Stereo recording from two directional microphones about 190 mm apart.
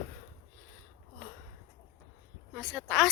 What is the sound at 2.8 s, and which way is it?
Speech, 5° left (ahead or behind).